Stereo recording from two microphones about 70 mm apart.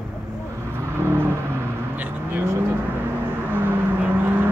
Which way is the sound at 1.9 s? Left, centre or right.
Right.